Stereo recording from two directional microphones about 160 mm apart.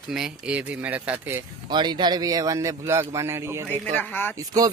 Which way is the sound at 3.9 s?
10° left (ahead or behind).